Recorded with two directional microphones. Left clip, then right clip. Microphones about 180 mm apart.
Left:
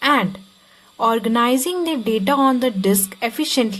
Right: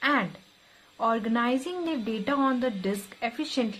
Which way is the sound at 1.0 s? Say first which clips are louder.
Left 9 dB; 50° left (ahead or behind).